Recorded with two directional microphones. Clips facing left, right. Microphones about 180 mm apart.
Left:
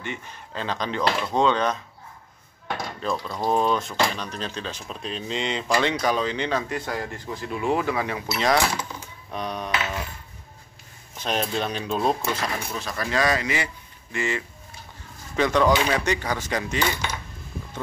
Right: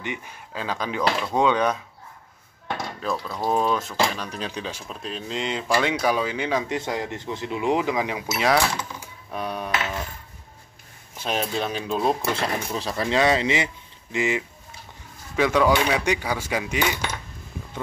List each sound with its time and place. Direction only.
0.0 s speech: 15° right (ahead or behind)
3.0 s speech: 5° right (ahead or behind)
6.7 s speech: 20° right (ahead or behind)
9.0 s typing: 10° right (ahead or behind)
11.1 s speech: 5° right (ahead or behind)
12.4 s speech: 30° right (ahead or behind); by 17.0 s 10° right (ahead or behind)